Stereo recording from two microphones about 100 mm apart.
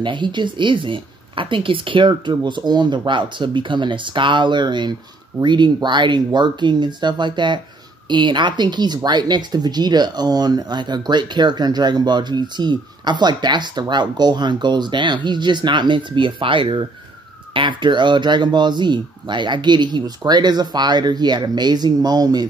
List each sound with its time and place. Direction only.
0.0 s speech: 50° right (ahead or behind)